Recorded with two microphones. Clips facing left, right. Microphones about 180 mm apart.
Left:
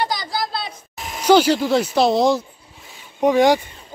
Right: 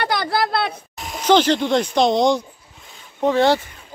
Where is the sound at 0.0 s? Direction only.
60° right (ahead or behind).